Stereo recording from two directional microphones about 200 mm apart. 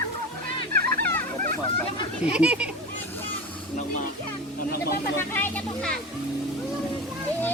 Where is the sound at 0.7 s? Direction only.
50° right (ahead or behind).